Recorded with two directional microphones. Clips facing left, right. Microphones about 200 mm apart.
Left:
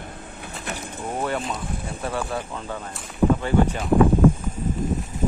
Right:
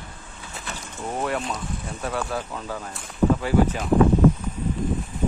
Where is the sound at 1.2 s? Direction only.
Centre (ahead or behind).